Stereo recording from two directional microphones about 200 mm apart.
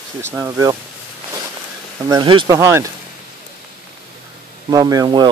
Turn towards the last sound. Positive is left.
turn(degrees=-20)  # may be behind; listen again after turning